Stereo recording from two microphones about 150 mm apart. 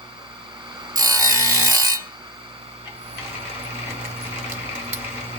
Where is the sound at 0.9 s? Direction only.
25° right (ahead or behind).